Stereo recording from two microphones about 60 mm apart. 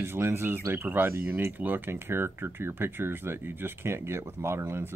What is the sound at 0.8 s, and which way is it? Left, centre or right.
Speech, right.